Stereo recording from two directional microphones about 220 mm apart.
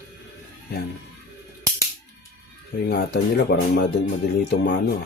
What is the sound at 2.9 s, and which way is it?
Speech, 45° left (ahead or behind).